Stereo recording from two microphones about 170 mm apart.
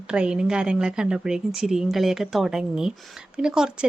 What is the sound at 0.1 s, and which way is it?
Speech, 5° right (ahead or behind).